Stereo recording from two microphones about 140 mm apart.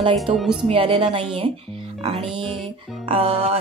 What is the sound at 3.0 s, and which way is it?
Speech, 40° right (ahead or behind).